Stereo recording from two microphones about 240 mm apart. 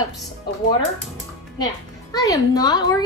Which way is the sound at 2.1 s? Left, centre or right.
Centre.